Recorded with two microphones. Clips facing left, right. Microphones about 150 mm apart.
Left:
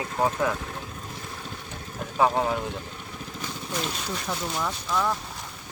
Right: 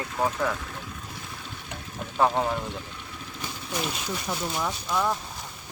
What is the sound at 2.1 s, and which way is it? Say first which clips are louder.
Speech: left 1 dB; 5° left (ahead or behind).